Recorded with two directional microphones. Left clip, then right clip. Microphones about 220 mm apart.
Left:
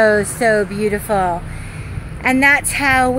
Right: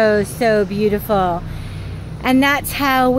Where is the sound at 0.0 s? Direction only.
10° left (ahead or behind).